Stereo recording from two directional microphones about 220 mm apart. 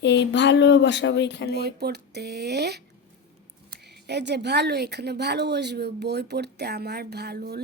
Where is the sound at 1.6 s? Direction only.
45° right (ahead or behind).